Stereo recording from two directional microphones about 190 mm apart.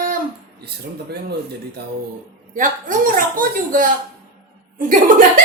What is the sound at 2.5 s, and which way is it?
Speech, 45° right (ahead or behind).